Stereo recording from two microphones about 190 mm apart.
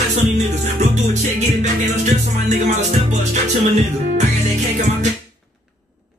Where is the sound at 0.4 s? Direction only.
40° right (ahead or behind).